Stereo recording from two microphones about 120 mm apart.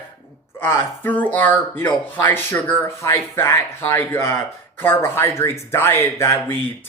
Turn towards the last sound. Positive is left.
turn(degrees=20)  # may be behind; listen again after turning